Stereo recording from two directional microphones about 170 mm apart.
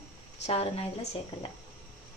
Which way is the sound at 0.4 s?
40° left (ahead or behind).